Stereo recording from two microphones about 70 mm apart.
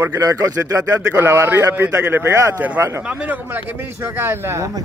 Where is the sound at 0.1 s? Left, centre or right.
Right.